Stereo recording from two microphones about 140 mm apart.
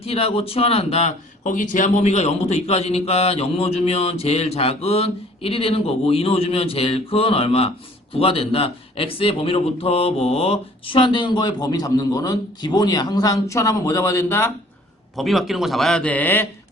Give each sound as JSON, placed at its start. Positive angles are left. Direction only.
{"t": 0.0, "sound": "a man's voice", "side_deg": 45}
{"t": 1.5, "sound": "a man's voice", "side_deg": 70}
{"t": 15.1, "sound": "a man's voice", "side_deg": 0}